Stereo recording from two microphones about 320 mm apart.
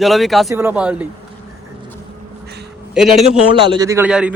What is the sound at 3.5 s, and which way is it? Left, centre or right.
Speech, centre.